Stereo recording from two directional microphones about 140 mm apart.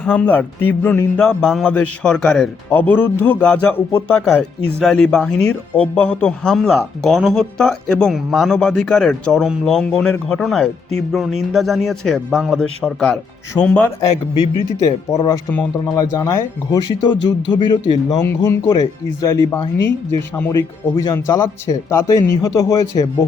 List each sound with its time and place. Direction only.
0.0 s speech: 10° left (ahead or behind)
14.8 s speech: 25° left (ahead or behind)